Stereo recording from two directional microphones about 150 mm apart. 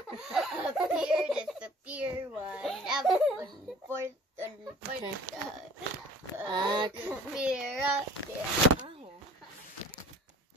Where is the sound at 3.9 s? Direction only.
20° right (ahead or behind).